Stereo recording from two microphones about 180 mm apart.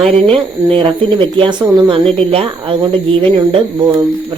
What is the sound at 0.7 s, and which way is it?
Speech, 30° right (ahead or behind).